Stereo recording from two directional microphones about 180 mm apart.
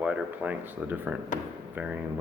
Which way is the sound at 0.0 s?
5° right (ahead or behind).